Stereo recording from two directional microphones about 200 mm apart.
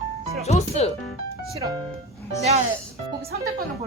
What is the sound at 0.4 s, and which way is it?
Speech, 30° left (ahead or behind).